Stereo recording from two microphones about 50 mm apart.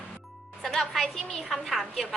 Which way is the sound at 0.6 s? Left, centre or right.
Centre.